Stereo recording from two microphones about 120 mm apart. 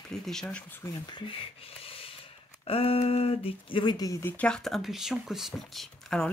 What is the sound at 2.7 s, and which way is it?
Speech, 55° left (ahead or behind).